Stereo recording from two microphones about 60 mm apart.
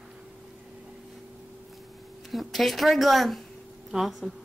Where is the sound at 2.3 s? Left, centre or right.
Centre.